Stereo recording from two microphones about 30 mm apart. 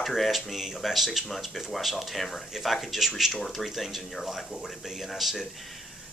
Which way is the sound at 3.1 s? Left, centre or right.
Centre.